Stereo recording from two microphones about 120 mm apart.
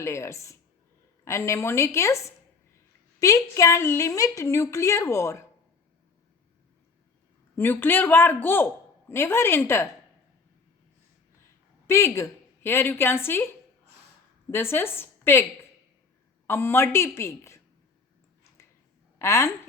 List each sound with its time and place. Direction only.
0.0 s a woman's voice: 25° left (ahead or behind)
7.5 s a man's voice: 15° left (ahead or behind)
11.9 s a woman's voice: 25° left (ahead or behind)
14.5 s a woman's voice: 20° left (ahead or behind)
16.5 s a woman's voice: 20° left (ahead or behind)
19.2 s a woman's voice: 25° left (ahead or behind)